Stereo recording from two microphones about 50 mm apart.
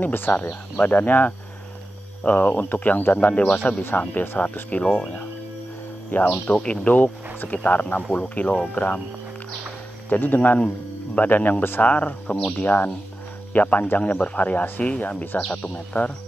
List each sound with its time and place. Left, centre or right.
0.0 s speech: left
3.9 s speech: left
6.2 s speech: left
10.0 s speech: left